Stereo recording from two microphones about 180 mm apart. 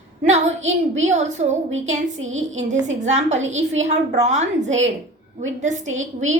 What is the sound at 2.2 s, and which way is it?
Speech, 90° right.